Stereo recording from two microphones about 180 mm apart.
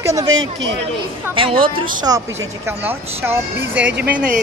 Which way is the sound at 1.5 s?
30° right (ahead or behind).